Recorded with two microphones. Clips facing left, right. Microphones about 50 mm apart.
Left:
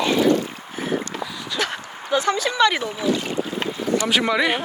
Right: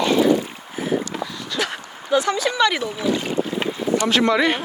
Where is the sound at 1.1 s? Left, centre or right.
Centre.